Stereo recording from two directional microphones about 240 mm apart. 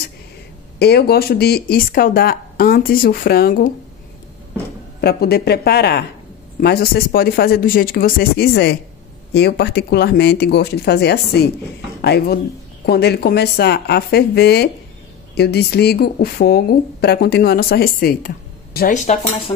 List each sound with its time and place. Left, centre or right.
0.7 s a woman's voice: left
5.0 s a woman's voice: left